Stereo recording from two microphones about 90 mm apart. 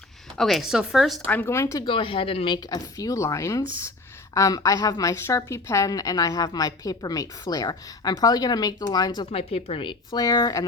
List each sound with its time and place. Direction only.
0.3 s speech: centre (ahead or behind)
1.5 s speech: 35° left (ahead or behind)
1.9 s speech: 75° left (ahead or behind)
2.6 s a woman's voice: 40° left (ahead or behind)
9.3 s speech: 90° left
10.1 s a woman's voice: 50° left (ahead or behind)